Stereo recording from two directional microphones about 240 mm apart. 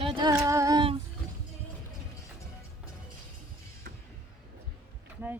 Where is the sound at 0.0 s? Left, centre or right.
Centre.